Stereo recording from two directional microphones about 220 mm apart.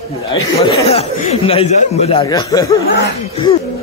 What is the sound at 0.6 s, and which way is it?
Speech, 25° left (ahead or behind).